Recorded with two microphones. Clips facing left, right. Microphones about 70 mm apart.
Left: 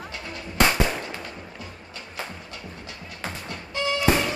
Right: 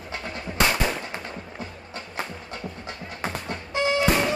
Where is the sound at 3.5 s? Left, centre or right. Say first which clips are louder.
Right 3 dB; right.